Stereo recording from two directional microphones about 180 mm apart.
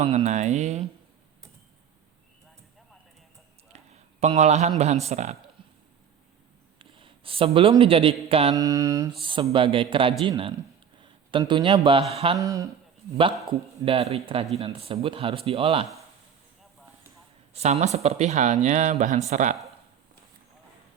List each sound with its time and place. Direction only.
0.0 s speech: 35° right (ahead or behind)
3.7 s a sound: 35° right (ahead or behind)
4.2 s speech: 40° right (ahead or behind)
6.7 s a sound: 30° right (ahead or behind)
7.8 s speech: 30° right (ahead or behind)
8.5 s a man's voice: 20° right (ahead or behind)
9.2 s a man's voice: 30° right (ahead or behind)
12.4 s speech: 20° right (ahead or behind)
13.8 s speech: 35° right (ahead or behind)
17.5 s speech: 40° right (ahead or behind)